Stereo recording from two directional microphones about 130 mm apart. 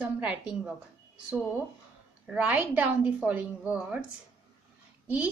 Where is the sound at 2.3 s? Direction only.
10° right (ahead or behind).